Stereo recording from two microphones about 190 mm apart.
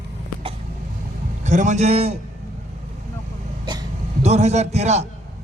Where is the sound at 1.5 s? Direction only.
40° right (ahead or behind).